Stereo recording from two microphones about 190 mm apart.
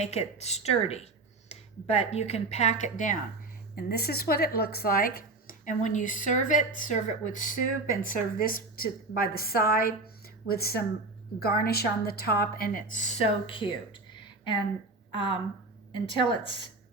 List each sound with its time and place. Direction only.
0.0 s speech: 35° left (ahead or behind)
3.8 s speech: 55° left (ahead or behind); by 14.6 s 25° left (ahead or behind)
15.9 s speech: 25° left (ahead or behind)